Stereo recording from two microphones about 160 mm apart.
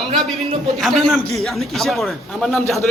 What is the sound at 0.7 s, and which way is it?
A man's voice, centre (ahead or behind).